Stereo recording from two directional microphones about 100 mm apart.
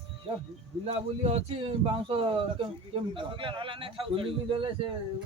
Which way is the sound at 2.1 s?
60° right (ahead or behind).